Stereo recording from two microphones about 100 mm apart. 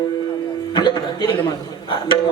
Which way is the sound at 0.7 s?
45° left (ahead or behind).